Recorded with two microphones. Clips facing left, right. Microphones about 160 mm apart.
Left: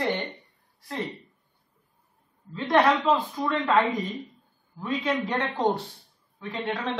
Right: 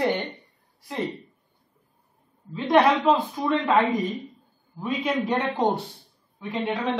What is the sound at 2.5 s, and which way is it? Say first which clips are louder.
A man's voice: right 2 dB; 15° right (ahead or behind).